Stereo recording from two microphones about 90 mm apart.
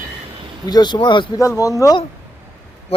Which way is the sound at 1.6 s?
40° left (ahead or behind).